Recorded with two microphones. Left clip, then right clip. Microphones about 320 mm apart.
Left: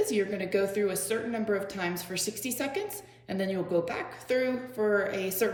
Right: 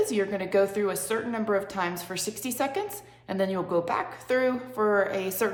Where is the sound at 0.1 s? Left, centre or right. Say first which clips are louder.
Right 3 dB; centre.